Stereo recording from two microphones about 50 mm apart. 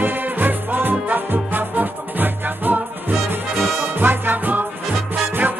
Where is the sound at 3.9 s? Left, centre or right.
Right.